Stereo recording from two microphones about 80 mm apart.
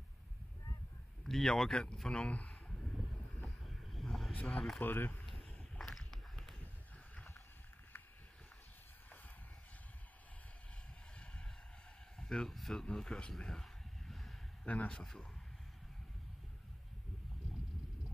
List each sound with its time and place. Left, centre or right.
1.2 s speech: centre
2.5 s vehicle: centre
4.4 s speech: centre
4.7 s speech: left
5.2 s a sound: centre
11.1 s vehicle: centre
12.2 s speech: centre
12.8 s a sound: centre
14.7 s speech: centre